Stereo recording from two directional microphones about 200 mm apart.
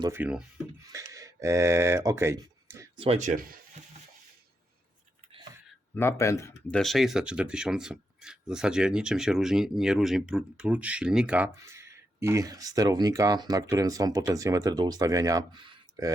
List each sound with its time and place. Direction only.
0.0 s speech: 10° right (ahead or behind)
0.9 s a sound: 15° right (ahead or behind)
3.0 s speech: 35° right (ahead or behind)
5.9 s speech: 10° left (ahead or behind); by 16.1 s 20° right (ahead or behind)